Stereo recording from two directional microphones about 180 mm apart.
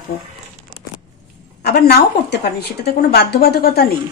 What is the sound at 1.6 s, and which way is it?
A woman's voice, 65° left (ahead or behind).